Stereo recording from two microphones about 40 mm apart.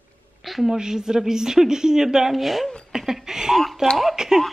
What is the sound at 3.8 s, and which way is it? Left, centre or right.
Speech, centre.